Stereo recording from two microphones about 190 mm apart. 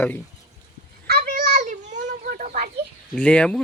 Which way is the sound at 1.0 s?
50° right (ahead or behind).